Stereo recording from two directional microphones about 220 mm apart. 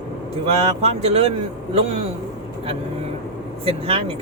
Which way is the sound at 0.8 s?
30° right (ahead or behind).